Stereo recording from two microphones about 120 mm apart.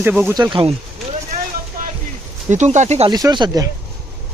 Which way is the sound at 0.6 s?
60° right (ahead or behind).